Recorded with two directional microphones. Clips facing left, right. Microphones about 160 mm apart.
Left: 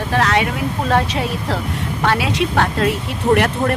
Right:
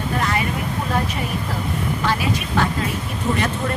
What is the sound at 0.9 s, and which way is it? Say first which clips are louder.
A woman's voice: left 8 dB; 80° left.